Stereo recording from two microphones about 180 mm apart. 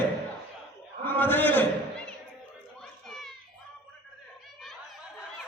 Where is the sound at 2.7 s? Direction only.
5° left (ahead or behind).